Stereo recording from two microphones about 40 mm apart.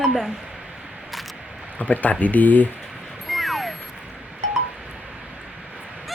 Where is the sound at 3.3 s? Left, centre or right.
Centre.